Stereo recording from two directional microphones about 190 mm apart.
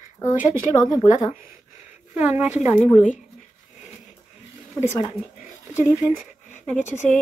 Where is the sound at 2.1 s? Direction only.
10° right (ahead or behind).